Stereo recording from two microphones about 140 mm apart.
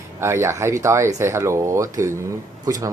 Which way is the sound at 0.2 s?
20° right (ahead or behind).